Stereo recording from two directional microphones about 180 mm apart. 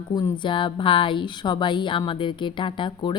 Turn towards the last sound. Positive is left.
turn(degrees=25)  # may be behind; listen again after turning